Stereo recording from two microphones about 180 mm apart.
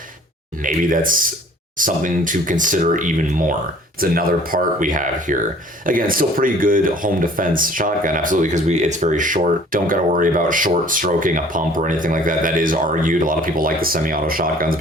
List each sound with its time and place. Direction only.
0.6 s speech: 50° right (ahead or behind)